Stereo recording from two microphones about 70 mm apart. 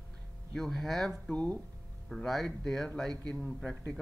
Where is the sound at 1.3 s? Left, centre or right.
Centre.